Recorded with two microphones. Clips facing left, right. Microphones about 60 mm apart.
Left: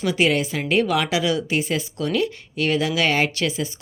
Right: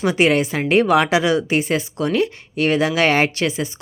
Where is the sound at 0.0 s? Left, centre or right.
Right.